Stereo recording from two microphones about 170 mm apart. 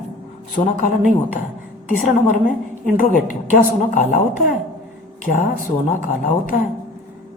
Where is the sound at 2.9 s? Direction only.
55° left (ahead or behind).